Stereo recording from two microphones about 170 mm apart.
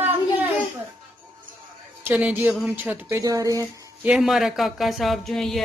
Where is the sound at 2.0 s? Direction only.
10° right (ahead or behind).